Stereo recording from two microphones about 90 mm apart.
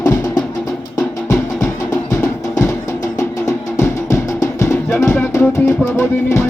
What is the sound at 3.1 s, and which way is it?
Music, 35° left (ahead or behind).